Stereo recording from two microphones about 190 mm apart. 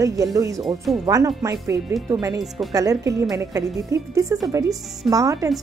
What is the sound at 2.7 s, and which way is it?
A woman's voice, 20° right (ahead or behind).